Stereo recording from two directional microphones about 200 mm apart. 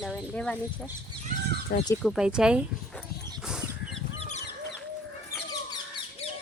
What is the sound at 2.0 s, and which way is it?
Speech, centre (ahead or behind).